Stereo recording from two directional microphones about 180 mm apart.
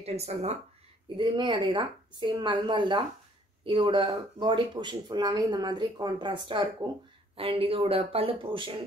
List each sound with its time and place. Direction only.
0.0 s speech: 35° right (ahead or behind)